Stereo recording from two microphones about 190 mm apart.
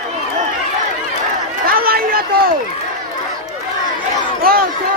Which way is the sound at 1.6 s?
50° right (ahead or behind).